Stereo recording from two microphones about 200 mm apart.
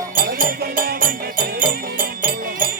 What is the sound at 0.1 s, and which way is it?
Music, 45° right (ahead or behind).